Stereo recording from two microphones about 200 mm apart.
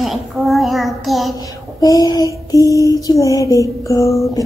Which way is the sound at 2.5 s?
15° left (ahead or behind).